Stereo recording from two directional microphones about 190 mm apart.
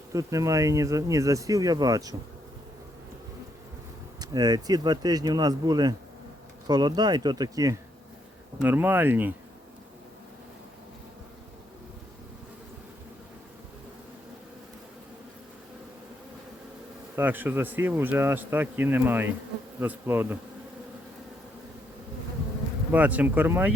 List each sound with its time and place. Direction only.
0.1 s speech: 15° right (ahead or behind)
4.2 s speech: 20° right (ahead or behind)
17.2 s speech: 10° right (ahead or behind)
22.9 s speech: 10° right (ahead or behind)